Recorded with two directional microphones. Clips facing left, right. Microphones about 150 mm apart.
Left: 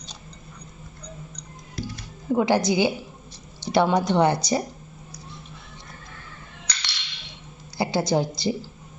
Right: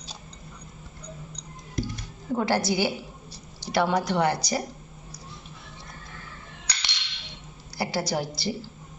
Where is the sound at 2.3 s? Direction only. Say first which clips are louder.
Left 4 dB; 15° left (ahead or behind).